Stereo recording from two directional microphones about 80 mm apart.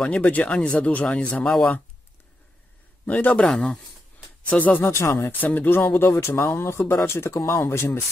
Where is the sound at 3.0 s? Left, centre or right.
Centre.